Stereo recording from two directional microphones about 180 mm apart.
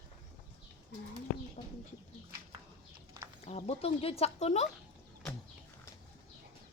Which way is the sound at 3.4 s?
35° left (ahead or behind).